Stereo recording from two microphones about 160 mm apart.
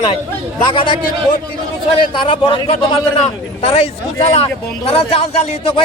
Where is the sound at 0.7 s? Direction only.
30° left (ahead or behind).